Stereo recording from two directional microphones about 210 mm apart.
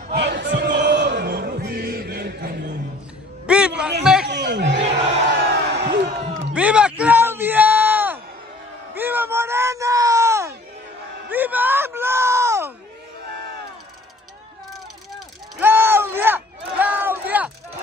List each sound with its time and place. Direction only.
0.1 s music: 55° right (ahead or behind)
3.4 s a sound: 5° right (ahead or behind)
4.0 s chatter: 5° right (ahead or behind)
4.3 s chatter: 55° right (ahead or behind)
5.3 s crowd: 55° right (ahead or behind)
6.5 s bellow: 5° right (ahead or behind)
8.9 s a sound: 10° right (ahead or behind)
11.2 s music: 10° right (ahead or behind)
15.1 s crowd: 10° right (ahead or behind)